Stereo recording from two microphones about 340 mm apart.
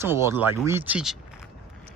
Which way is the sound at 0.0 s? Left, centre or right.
Centre.